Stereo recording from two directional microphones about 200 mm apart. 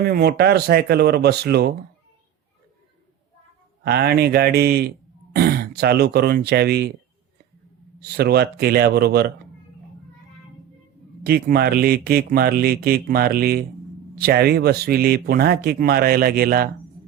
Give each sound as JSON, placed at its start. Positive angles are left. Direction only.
{"t": 0.0, "sound": "speech", "side_deg": -50}
{"t": 3.8, "sound": "speech", "side_deg": -50}
{"t": 8.0, "sound": "speech", "side_deg": -55}
{"t": 11.2, "sound": "speech", "side_deg": -50}